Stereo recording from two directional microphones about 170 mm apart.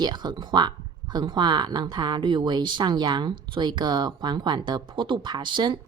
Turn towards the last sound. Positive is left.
turn(degrees=-25)  # may be behind; listen again after turning